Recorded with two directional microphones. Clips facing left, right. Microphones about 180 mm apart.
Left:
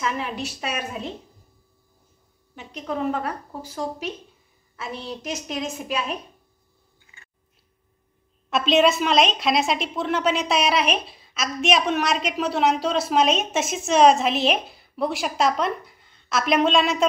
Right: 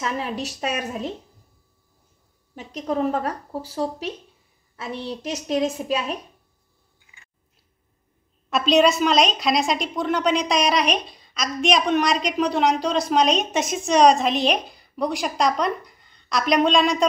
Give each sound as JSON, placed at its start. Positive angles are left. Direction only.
{"t": 0.0, "sound": "speech", "side_deg": -35}
{"t": 2.5, "sound": "speech", "side_deg": -40}
{"t": 8.5, "sound": "a woman's voice", "side_deg": 0}